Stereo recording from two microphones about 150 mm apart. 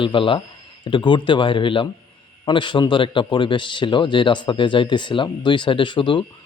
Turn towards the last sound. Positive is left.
turn(degrees=35)  # may be behind; listen again after turning